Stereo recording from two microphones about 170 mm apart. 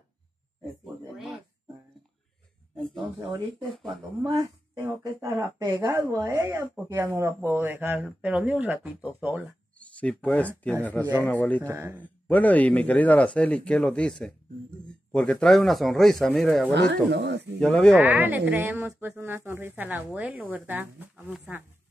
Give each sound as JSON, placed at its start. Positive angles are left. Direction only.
{"t": 1.1, "sound": "a sound", "side_deg": 0}
{"t": 3.2, "sound": "speech", "side_deg": -20}
{"t": 9.8, "sound": "speech", "side_deg": 10}
{"t": 11.6, "sound": "speech", "side_deg": -15}
{"t": 12.0, "sound": "speech", "side_deg": 10}
{"t": 16.7, "sound": "speech", "side_deg": -90}
{"t": 17.6, "sound": "speech", "side_deg": 5}
{"t": 17.9, "sound": "speech", "side_deg": -10}